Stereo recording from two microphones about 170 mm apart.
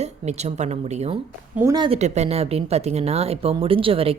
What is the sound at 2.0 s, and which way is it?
Speech, 40° right (ahead or behind).